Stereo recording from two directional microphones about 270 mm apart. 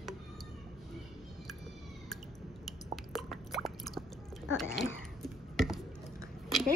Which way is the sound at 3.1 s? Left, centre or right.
Centre.